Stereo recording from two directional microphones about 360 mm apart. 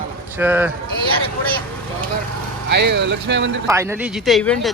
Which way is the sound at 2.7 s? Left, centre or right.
Right.